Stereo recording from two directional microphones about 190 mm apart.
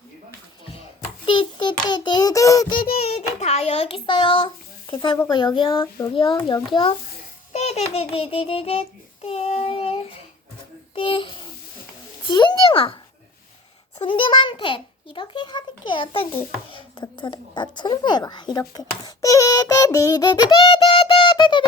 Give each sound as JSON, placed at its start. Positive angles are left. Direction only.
{"t": 1.2, "sound": "a sound", "side_deg": 25}
{"t": 1.9, "sound": "a child's voice", "side_deg": 20}
{"t": 2.8, "sound": "child singing", "side_deg": 30}
{"t": 5.3, "sound": "a child's voice", "side_deg": 25}
{"t": 7.5, "sound": "babbling", "side_deg": 35}
{"t": 10.9, "sound": "a child's voice", "side_deg": 25}
{"t": 14.0, "sound": "a child's voice", "side_deg": 25}